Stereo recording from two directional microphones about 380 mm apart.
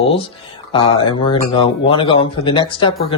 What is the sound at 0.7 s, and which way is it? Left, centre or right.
Speech, centre.